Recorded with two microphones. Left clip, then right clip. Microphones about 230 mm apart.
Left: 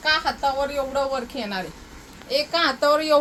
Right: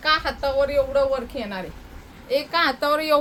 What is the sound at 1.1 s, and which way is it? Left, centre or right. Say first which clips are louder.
A woman's voice: even; centre.